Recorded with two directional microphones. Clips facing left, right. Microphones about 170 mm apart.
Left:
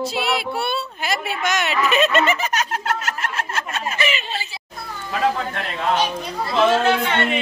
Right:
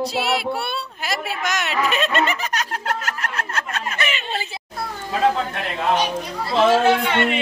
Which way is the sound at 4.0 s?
55° right (ahead or behind).